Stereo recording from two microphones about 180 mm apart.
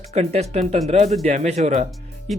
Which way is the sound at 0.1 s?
35° right (ahead or behind).